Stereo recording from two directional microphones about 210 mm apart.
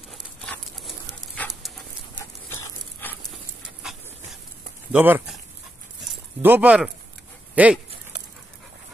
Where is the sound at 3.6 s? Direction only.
Centre (ahead or behind).